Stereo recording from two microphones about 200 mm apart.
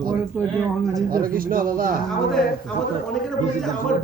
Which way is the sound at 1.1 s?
45° right (ahead or behind).